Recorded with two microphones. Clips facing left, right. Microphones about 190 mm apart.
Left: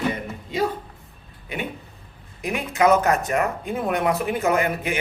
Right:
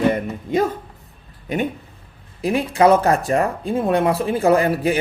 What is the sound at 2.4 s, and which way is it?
Speech, 35° right (ahead or behind).